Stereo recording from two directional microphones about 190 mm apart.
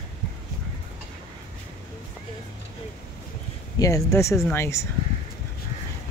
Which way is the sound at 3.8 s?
15° left (ahead or behind).